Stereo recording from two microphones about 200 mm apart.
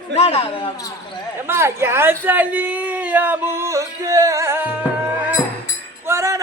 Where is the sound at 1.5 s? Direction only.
10° right (ahead or behind).